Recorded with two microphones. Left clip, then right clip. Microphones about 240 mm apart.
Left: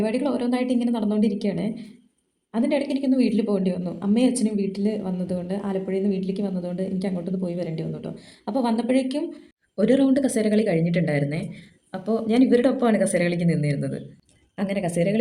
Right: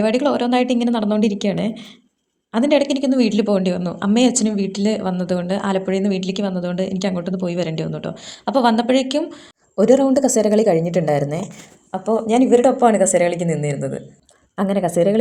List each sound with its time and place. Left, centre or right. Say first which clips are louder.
0.0 s a woman's voice: right 7 dB; right
9.8 s speech: right 6 dB; centre
11.9 s a woman's voice: right 6 dB; centre
14.6 s speech: right 7 dB; centre